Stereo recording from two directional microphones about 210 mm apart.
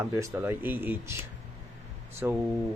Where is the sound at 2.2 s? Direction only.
10° right (ahead or behind).